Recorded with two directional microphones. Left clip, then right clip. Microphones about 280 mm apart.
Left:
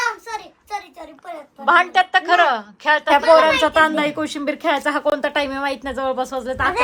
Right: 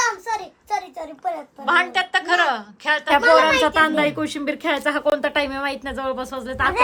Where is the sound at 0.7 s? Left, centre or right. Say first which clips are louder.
Right 6 dB; right.